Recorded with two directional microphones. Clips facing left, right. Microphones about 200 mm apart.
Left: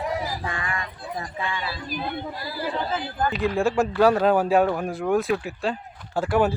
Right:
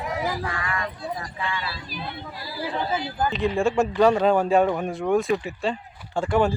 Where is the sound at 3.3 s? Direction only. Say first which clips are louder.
Even; centre (ahead or behind).